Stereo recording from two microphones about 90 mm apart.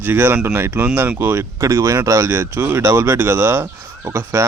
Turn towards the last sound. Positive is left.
turn(degrees=-25)  # may be behind; listen again after turning